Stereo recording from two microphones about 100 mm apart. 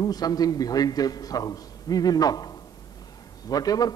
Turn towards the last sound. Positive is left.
turn(degrees=40)  # may be behind; listen again after turning